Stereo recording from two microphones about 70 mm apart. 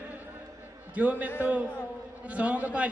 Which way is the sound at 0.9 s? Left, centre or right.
Centre.